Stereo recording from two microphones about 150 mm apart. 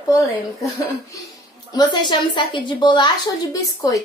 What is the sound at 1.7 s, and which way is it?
A woman's voice, 30° left (ahead or behind).